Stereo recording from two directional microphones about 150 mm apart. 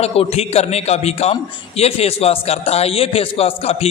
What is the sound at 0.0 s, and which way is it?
A man's voice, 45° left (ahead or behind).